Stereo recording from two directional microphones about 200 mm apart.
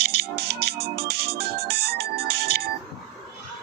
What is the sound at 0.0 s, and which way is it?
Music, 55° right (ahead or behind).